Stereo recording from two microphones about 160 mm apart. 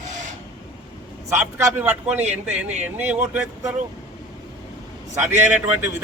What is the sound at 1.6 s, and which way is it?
A man's voice, 10° right (ahead or behind).